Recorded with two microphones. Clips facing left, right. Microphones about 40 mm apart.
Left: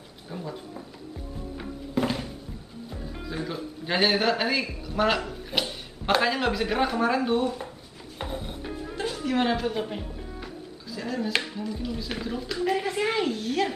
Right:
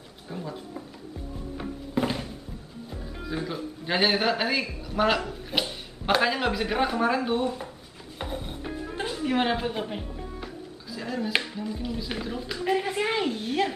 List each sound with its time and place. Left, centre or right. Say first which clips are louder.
0.3 s speech: even; centre
1.6 s music: even; centre
2.9 s speech: right 2 dB; centre
8.2 s music: even; centre
8.9 s music: even; centre
11.0 s a woman's voice: even; centre